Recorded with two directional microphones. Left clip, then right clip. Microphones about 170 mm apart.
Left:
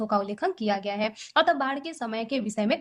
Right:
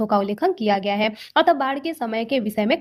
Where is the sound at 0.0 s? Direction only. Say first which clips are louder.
Right 6 dB; 40° right (ahead or behind).